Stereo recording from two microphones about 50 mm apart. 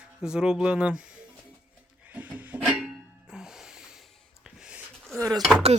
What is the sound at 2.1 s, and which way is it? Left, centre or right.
Music, right.